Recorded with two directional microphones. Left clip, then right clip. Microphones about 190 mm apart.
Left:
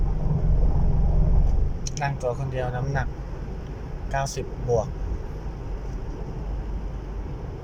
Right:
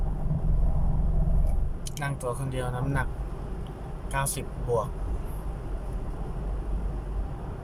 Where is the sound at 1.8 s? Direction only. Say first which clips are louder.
Left 5 dB; 15° right (ahead or behind).